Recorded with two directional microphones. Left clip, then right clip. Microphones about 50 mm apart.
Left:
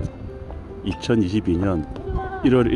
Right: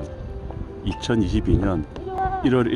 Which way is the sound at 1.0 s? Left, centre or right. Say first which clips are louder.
Left 2 dB; left.